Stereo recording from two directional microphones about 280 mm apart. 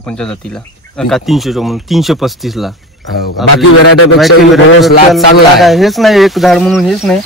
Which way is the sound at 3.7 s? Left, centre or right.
Left.